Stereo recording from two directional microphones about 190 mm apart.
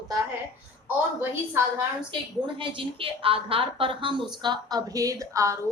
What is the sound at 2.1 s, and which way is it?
A woman's voice, 25° right (ahead or behind).